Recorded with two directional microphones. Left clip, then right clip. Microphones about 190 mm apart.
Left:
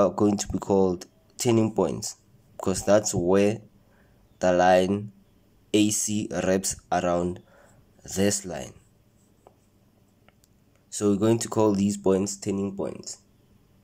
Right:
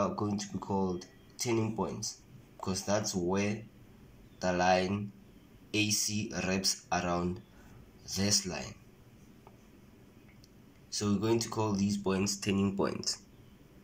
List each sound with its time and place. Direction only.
0.0 s speech: 50° left (ahead or behind)
11.1 s speech: 45° left (ahead or behind); by 13.0 s 10° left (ahead or behind)